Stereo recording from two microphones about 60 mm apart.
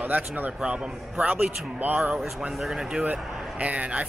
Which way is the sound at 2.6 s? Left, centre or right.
Centre.